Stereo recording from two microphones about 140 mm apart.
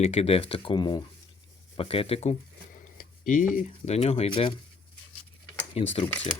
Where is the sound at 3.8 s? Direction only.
40° left (ahead or behind).